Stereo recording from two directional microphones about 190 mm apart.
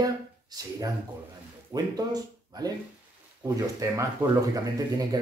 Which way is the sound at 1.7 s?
20° right (ahead or behind).